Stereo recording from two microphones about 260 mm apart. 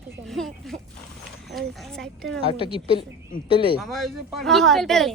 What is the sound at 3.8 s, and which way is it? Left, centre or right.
Speech, centre.